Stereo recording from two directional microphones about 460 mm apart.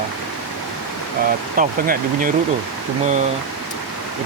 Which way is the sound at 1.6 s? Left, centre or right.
Centre.